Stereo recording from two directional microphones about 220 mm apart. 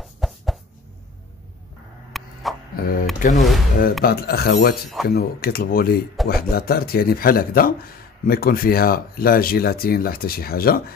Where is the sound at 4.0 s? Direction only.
45° left (ahead or behind).